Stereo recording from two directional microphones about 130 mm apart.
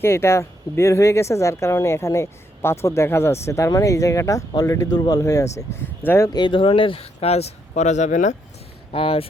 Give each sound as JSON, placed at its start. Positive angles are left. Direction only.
{"t": 0.0, "sound": "speech", "side_deg": 20}
{"t": 7.7, "sound": "speech", "side_deg": 65}
{"t": 8.9, "sound": "speech", "side_deg": 45}